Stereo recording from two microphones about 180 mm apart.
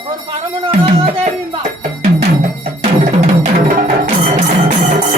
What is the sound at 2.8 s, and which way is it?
Music, 35° right (ahead or behind).